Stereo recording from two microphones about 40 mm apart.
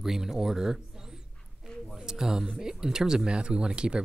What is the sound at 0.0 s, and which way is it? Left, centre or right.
Speech, centre.